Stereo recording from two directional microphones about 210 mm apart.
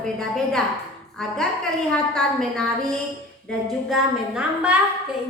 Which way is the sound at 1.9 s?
5° left (ahead or behind).